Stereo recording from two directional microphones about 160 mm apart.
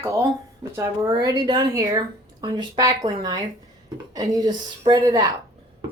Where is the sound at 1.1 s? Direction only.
30° right (ahead or behind).